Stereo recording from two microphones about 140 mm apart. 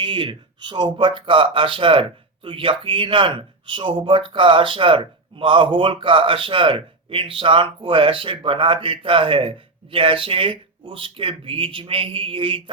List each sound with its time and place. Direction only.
0.0 s speech: 35° right (ahead or behind)